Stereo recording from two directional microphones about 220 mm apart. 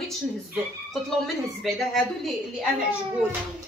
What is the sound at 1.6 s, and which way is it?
Speech, centre (ahead or behind).